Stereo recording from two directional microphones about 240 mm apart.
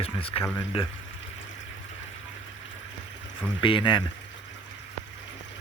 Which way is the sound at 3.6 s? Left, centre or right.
Left.